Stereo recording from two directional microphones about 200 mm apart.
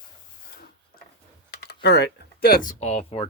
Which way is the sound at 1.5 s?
55° left (ahead or behind).